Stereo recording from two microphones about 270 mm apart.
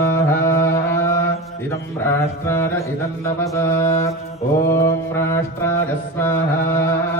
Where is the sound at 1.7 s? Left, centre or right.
Centre.